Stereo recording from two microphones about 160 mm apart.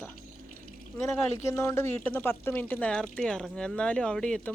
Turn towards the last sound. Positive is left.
turn(degrees=5)  # may be behind; listen again after turning